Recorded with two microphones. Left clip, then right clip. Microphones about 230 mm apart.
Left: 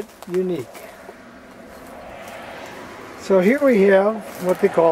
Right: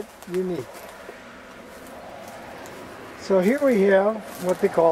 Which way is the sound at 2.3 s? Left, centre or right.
Centre.